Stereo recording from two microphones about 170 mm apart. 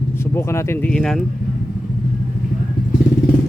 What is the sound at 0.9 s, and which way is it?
Speech, 5° left (ahead or behind).